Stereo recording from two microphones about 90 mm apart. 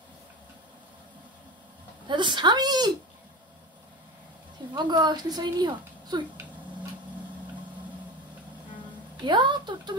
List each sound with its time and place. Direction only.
2.0 s a woman's voice: 60° right (ahead or behind)
4.7 s a woman's voice: 55° right (ahead or behind)
9.2 s a woman's voice: 60° right (ahead or behind)